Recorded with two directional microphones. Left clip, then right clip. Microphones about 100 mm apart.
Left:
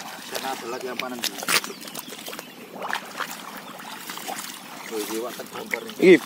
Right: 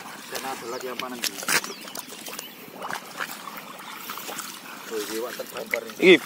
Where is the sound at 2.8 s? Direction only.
Centre (ahead or behind).